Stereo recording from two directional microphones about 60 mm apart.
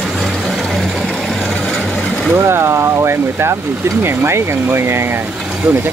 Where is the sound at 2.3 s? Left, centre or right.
Right.